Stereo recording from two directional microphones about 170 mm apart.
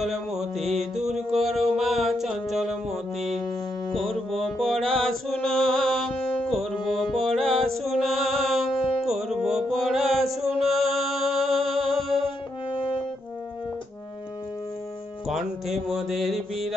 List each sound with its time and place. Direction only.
0.0 s music: centre (ahead or behind)
3.9 s mantra: centre (ahead or behind)
7.6 s music: centre (ahead or behind)
9.1 s mantra: centre (ahead or behind)
12.7 s french horn: 30° left (ahead or behind)
15.2 s music: centre (ahead or behind)